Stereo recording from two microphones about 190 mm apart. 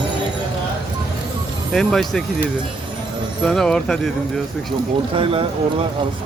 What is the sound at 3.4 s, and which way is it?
Speech, centre (ahead or behind).